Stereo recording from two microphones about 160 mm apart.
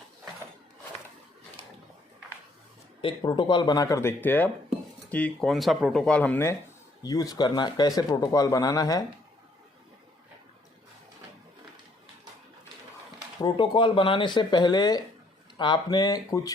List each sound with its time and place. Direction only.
3.0 s speech: 30° left (ahead or behind)
13.4 s speech: 30° left (ahead or behind)